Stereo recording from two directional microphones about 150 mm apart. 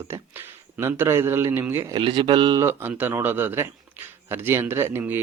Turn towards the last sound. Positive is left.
turn(degrees=-15)  # may be behind; listen again after turning